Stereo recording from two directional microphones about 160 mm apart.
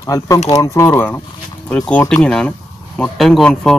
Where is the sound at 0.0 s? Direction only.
20° left (ahead or behind).